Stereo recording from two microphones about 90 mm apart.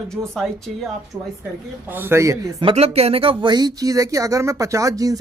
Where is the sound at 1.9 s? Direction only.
25° right (ahead or behind).